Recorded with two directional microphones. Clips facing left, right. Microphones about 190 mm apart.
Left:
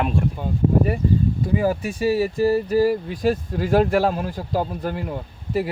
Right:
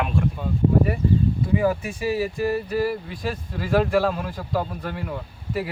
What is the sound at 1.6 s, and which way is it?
Speech, 35° left (ahead or behind).